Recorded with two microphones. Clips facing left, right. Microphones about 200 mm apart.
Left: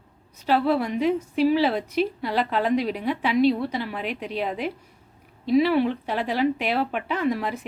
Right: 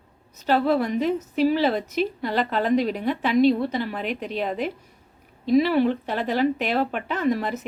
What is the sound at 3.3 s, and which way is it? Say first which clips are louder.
Speech: right 2 dB; 45° right (ahead or behind).